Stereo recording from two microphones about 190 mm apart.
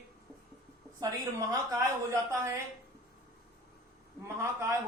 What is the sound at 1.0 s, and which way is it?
A woman's voice, 20° right (ahead or behind).